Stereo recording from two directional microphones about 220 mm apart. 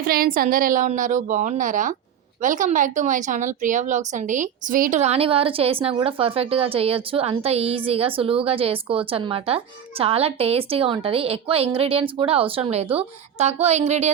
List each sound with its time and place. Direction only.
0.0 s a woman's voice: 40° right (ahead or behind)